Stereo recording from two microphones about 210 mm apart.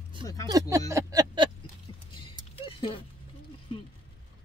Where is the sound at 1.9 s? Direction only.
25° left (ahead or behind).